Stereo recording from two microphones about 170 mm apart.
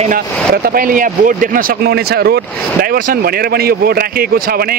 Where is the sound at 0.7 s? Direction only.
55° right (ahead or behind).